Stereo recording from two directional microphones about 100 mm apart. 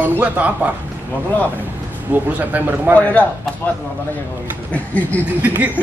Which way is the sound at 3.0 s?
15° left (ahead or behind).